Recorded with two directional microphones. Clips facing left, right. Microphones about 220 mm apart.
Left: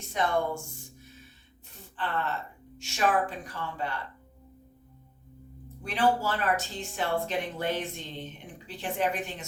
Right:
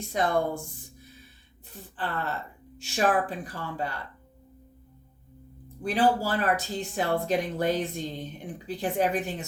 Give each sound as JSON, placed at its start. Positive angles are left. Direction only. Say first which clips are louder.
{"t": 0.1, "sound": "speech", "louder": "right 2 dB", "side_deg": -35}
{"t": 2.7, "sound": "speech", "louder": "right 2 dB", "side_deg": -35}
{"t": 5.8, "sound": "speech", "louder": "right 2 dB", "side_deg": -35}